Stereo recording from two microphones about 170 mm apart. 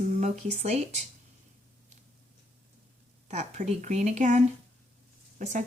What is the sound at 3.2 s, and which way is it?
Lullaby, 40° right (ahead or behind).